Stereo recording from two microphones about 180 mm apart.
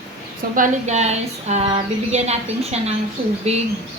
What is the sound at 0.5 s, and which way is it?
Speech, 45° right (ahead or behind).